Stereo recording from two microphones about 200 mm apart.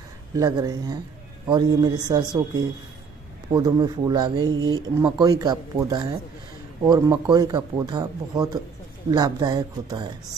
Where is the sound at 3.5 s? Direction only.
20° right (ahead or behind).